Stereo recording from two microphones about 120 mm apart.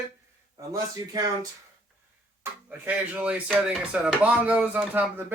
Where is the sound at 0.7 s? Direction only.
30° right (ahead or behind).